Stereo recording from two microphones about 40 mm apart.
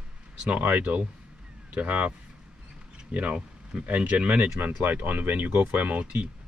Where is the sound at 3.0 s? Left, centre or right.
Right.